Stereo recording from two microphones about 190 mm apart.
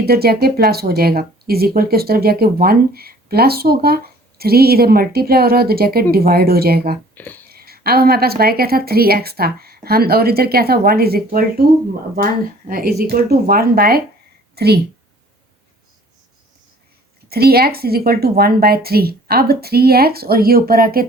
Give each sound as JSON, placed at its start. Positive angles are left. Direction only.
{"t": 0.0, "sound": "speech", "side_deg": -55}
{"t": 7.1, "sound": "a sound", "side_deg": 10}
{"t": 7.5, "sound": "a woman's voice", "side_deg": -55}
{"t": 17.2, "sound": "speech", "side_deg": -55}